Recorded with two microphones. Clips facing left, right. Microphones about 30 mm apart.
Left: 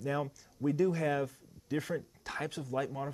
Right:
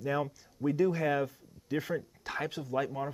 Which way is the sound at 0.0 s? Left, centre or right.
Centre.